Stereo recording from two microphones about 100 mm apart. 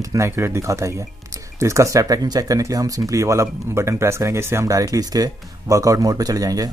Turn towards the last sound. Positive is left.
turn(degrees=-40)  # may be behind; listen again after turning